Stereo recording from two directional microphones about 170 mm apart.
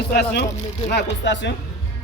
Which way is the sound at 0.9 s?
80° left.